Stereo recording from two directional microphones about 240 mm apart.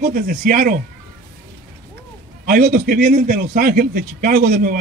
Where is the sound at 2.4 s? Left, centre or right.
Right.